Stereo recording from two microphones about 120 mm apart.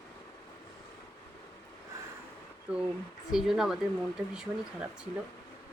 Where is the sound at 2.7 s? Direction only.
10° right (ahead or behind).